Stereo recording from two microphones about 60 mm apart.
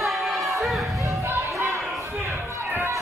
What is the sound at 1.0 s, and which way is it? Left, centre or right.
Music, right.